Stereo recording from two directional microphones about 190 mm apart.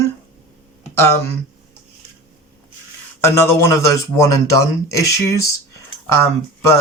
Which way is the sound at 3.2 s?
15° left (ahead or behind).